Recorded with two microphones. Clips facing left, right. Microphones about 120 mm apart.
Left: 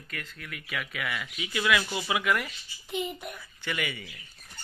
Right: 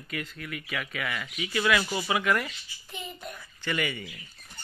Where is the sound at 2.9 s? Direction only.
15° left (ahead or behind).